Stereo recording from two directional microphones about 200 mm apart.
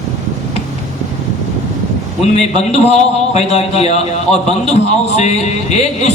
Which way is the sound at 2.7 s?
30° left (ahead or behind).